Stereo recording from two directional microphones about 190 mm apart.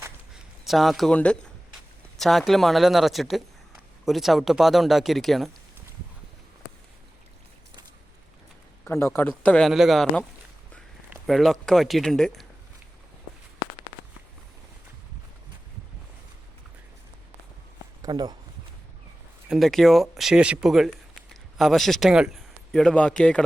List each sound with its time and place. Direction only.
0.0 s a sound: 5° right (ahead or behind)
2.1 s speech: centre (ahead or behind)
8.8 s a man's voice: 15° left (ahead or behind)
18.0 s speech: 20° right (ahead or behind)
19.5 s speech: centre (ahead or behind)